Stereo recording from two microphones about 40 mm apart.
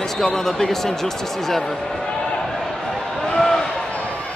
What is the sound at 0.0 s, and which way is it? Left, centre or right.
Speech, centre.